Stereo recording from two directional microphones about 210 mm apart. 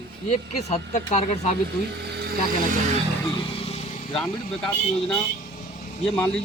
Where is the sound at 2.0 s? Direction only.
50° right (ahead or behind).